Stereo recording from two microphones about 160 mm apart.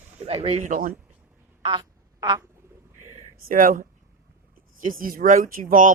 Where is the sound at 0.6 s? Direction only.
55° right (ahead or behind).